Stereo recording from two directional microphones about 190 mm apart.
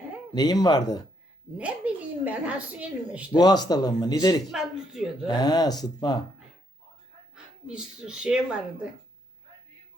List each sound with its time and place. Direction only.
0.3 s a man's voice: 20° left (ahead or behind)
1.5 s a woman's voice: 5° right (ahead or behind)
3.3 s a man's voice: 20° left (ahead or behind)
4.4 s speech: centre (ahead or behind)
5.3 s a man's voice: 20° left (ahead or behind)
7.3 s speech: 5° right (ahead or behind)